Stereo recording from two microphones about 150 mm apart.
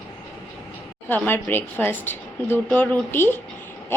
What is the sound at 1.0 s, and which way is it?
A woman's voice, 15° left (ahead or behind).